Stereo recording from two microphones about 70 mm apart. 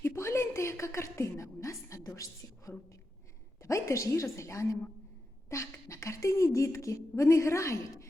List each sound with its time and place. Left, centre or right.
0.0 s a woman's voice: left